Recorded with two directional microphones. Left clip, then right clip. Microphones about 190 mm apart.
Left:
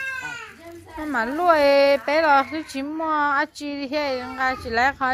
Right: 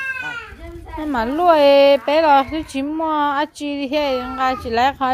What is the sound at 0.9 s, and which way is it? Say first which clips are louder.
A woman's voice: right 4 dB; 20° right (ahead or behind).